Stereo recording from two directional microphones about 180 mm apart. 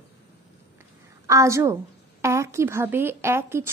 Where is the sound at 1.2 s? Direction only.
15° right (ahead or behind).